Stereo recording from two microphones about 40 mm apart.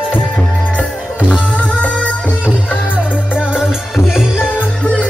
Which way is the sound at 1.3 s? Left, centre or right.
Left.